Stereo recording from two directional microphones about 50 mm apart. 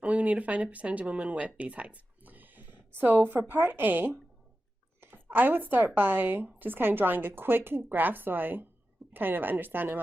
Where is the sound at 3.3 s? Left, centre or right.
Right.